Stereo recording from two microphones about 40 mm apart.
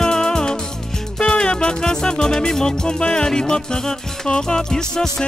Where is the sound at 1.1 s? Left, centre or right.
Left.